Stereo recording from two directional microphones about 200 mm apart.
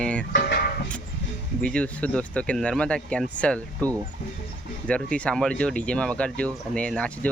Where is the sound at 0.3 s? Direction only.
50° left (ahead or behind).